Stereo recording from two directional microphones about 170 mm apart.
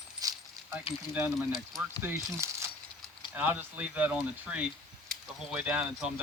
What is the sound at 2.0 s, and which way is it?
Speech, 15° right (ahead or behind).